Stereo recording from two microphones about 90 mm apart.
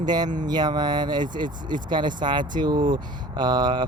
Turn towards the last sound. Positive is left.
turn(degrees=-55)  # may be behind; listen again after turning